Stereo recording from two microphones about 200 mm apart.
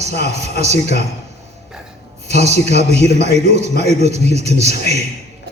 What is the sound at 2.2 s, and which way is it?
A man's voice, 35° right (ahead or behind).